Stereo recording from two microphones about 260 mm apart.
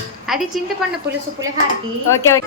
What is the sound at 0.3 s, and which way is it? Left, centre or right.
Speech, centre.